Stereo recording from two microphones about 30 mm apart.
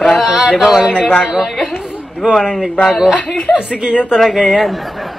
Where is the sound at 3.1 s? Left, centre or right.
Left.